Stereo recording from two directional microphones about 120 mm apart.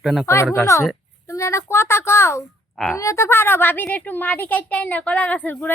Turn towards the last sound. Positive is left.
turn(degrees=10)  # may be behind; listen again after turning